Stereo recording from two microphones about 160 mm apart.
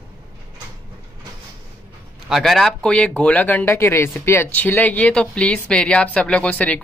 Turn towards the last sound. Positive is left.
turn(degrees=10)  # may be behind; listen again after turning